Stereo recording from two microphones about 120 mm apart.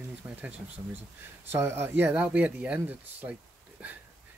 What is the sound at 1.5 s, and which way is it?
Speech, 20° right (ahead or behind).